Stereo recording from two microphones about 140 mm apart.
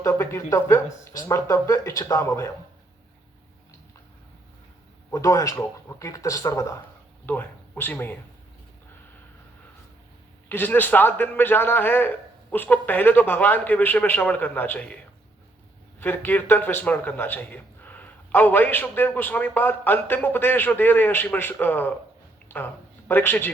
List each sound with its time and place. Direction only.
0.0 s speech: 20° left (ahead or behind)
5.1 s speech: 25° left (ahead or behind)
10.5 s a man's voice: 15° left (ahead or behind)
16.0 s a man's voice: 15° left (ahead or behind)